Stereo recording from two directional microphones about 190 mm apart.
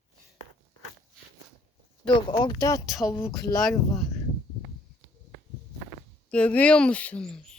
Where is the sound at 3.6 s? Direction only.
Centre (ahead or behind).